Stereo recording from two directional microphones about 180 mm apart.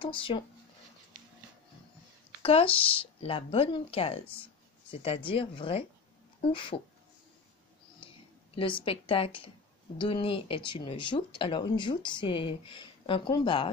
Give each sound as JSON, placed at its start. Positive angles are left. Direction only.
{"t": 0.0, "sound": "speech", "side_deg": 30}
{"t": 2.4, "sound": "speech", "side_deg": 30}
{"t": 8.5, "sound": "speech", "side_deg": 30}